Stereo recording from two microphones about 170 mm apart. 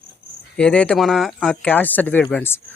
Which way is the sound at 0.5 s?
5° left (ahead or behind).